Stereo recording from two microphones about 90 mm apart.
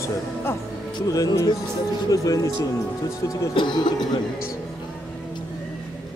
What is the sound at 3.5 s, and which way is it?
Speech, 55° left (ahead or behind).